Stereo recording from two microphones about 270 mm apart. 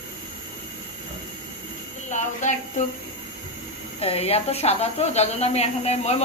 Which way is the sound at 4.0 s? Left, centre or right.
Left.